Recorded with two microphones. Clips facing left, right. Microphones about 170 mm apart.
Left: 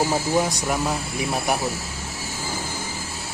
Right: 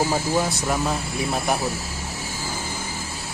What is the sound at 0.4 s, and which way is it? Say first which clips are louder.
Speech: even; 15° left (ahead or behind).